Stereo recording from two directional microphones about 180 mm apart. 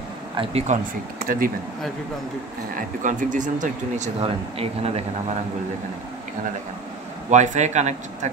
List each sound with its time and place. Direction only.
0.4 s speech: 35° right (ahead or behind)
1.2 s speech: 50° right (ahead or behind)
3.0 s speech: 45° right (ahead or behind)
7.2 s speech: 40° right (ahead or behind)